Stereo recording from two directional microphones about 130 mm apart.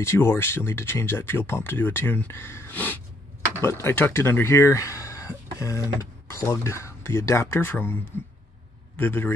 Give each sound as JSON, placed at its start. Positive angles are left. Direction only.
{"t": 0.0, "sound": "a man's voice", "side_deg": 20}